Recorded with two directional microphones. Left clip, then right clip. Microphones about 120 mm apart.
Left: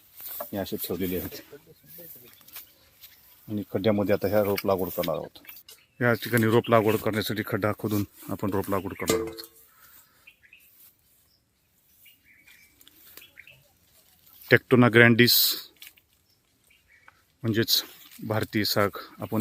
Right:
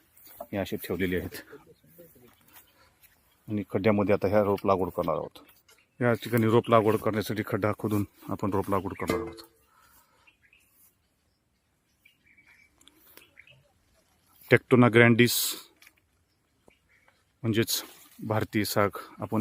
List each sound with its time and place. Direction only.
0.9 s speech: 30° right (ahead or behind)
3.5 s speech: 5° right (ahead or behind)
9.0 s speech: 20° left (ahead or behind)
12.9 s pig: 5° right (ahead or behind)
14.4 s speech: 5° right (ahead or behind)
17.4 s speech: centre (ahead or behind)